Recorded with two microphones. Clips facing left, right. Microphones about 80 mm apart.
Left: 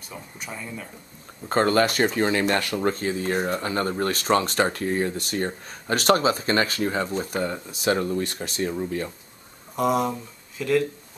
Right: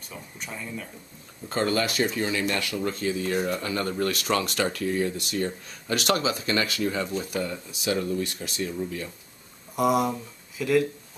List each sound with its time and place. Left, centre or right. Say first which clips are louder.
0.1 s speech: left 2 dB; centre
1.5 s speech: left 5 dB; left
9.8 s speech: even; centre